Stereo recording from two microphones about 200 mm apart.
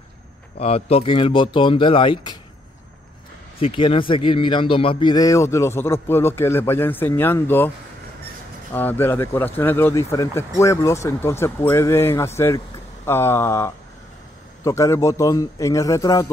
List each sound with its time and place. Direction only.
0.6 s speech: 30° left (ahead or behind)
3.5 s speech: 25° left (ahead or behind); by 7.7 s 10° left (ahead or behind)
8.7 s speech: 10° left (ahead or behind)